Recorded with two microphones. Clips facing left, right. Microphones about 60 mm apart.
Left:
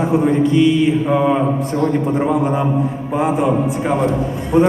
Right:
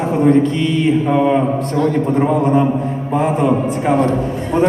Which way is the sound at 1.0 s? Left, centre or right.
Centre.